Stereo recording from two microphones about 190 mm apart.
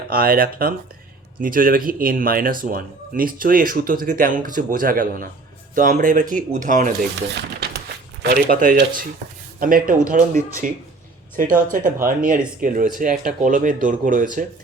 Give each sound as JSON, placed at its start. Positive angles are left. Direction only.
{"t": 0.1, "sound": "speech", "side_deg": -50}
{"t": 8.2, "sound": "speech", "side_deg": -55}